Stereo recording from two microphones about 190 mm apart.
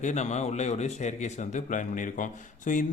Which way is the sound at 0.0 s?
35° left (ahead or behind).